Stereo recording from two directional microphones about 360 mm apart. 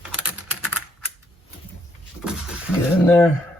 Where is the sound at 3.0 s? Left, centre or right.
Centre.